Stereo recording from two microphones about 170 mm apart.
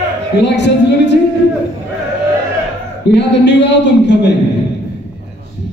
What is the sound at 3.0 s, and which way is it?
A man's voice, 90° left.